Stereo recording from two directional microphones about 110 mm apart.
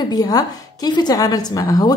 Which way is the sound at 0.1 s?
35° left (ahead or behind).